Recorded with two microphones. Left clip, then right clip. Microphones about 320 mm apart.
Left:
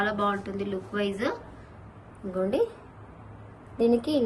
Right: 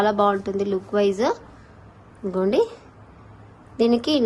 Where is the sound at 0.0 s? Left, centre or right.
Centre.